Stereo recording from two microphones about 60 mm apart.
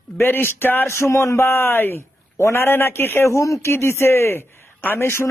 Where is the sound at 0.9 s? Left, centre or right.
Left.